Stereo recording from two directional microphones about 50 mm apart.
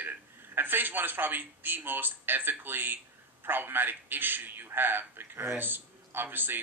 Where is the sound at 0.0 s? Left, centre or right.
Right.